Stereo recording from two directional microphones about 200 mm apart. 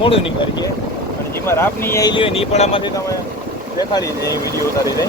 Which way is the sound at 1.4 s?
15° left (ahead or behind).